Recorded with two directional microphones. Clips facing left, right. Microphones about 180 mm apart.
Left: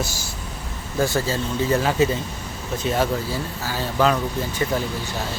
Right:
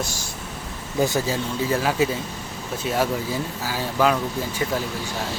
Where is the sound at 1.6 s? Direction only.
5° right (ahead or behind).